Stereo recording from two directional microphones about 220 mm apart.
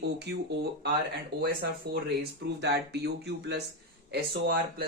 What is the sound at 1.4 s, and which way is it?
Speech, 45° right (ahead or behind).